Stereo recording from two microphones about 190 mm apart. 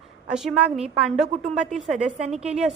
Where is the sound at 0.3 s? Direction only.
5° right (ahead or behind).